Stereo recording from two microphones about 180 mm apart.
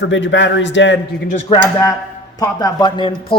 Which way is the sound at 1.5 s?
20° left (ahead or behind).